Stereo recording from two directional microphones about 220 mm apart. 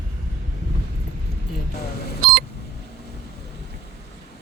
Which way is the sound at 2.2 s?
45° right (ahead or behind).